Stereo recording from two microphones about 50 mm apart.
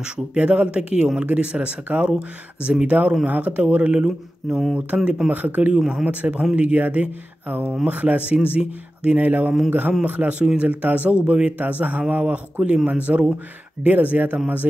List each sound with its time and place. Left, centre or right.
0.3 s speech: right
3.3 s speech: right
4.5 s speech: centre
4.7 s speech: right
5.7 s speech: centre
6.0 s speech: right